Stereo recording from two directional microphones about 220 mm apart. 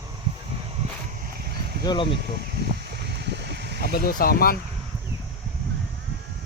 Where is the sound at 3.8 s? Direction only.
45° left (ahead or behind).